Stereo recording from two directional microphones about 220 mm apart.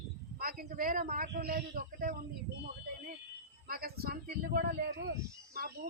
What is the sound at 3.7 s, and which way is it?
A man's voice, 45° right (ahead or behind).